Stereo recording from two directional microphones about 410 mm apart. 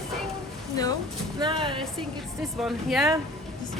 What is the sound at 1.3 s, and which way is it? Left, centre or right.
Music, centre.